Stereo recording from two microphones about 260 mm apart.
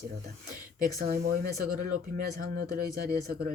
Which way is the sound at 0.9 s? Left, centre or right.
Right.